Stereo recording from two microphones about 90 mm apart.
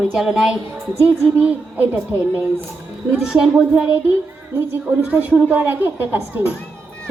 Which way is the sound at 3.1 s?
5° right (ahead or behind).